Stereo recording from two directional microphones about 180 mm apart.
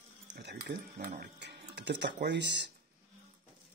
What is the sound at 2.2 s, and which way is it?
Speech, 75° right (ahead or behind).